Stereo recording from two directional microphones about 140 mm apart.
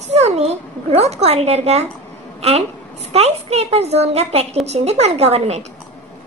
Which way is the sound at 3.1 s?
50° right (ahead or behind).